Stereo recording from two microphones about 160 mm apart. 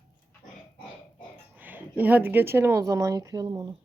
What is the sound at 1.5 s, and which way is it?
Speech, 10° right (ahead or behind).